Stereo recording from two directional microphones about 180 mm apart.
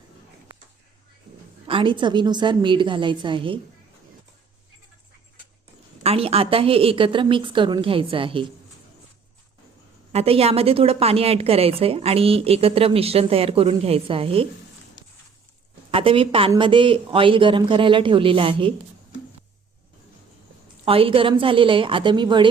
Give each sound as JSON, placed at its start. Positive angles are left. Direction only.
{"t": 1.6, "sound": "a woman's voice", "side_deg": -30}
{"t": 6.0, "sound": "a woman's voice", "side_deg": -35}
{"t": 10.1, "sound": "a woman's voice", "side_deg": -35}
{"t": 15.9, "sound": "a woman's voice", "side_deg": -30}
{"t": 20.8, "sound": "a woman's voice", "side_deg": -30}